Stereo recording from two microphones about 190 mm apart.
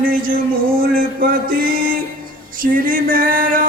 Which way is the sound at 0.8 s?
50° right (ahead or behind).